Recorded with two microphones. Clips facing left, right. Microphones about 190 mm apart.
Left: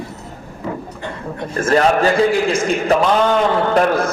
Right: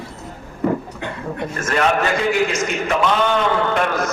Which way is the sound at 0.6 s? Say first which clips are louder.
Right 6 dB; 55° right (ahead or behind).